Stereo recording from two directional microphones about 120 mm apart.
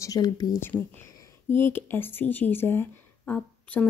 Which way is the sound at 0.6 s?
20° left (ahead or behind).